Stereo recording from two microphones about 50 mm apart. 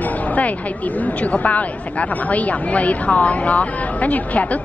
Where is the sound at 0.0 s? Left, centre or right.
Left.